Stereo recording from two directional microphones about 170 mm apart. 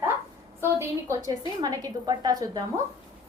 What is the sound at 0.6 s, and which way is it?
A woman's voice, 15° right (ahead or behind).